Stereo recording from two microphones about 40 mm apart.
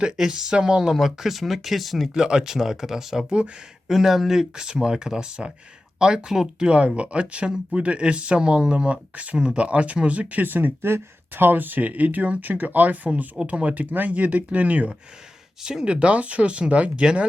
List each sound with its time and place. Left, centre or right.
0.3 s speech: centre
0.9 s speech: centre
2.1 s speech: centre
3.2 s speech: right
3.8 s speech: centre
6.7 s speech: right
10.8 s speech: right
15.6 s speech: centre